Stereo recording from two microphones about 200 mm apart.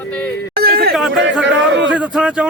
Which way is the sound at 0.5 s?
50° right (ahead or behind).